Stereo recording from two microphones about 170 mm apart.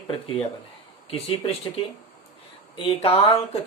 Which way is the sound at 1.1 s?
30° left (ahead or behind).